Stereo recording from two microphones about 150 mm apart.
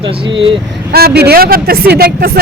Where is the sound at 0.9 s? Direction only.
90° right.